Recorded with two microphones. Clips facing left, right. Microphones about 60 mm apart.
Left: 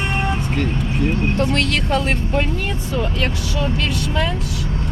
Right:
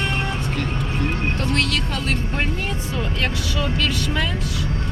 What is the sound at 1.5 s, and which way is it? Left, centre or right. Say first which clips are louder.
Speech: left 4 dB; left.